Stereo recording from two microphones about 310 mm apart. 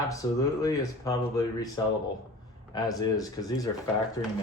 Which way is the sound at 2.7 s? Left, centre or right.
Centre.